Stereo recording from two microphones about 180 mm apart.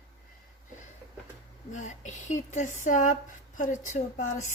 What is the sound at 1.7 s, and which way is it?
Speech, 45° left (ahead or behind).